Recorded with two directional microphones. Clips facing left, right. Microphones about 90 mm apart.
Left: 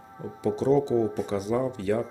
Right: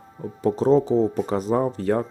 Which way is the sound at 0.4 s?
40° right (ahead or behind).